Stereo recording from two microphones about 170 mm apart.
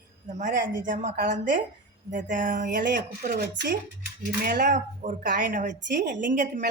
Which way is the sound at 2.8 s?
75° right (ahead or behind).